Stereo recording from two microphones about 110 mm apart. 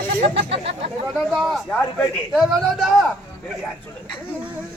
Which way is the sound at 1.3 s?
Centre (ahead or behind).